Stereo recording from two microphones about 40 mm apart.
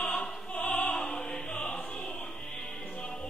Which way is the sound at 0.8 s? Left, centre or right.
Centre.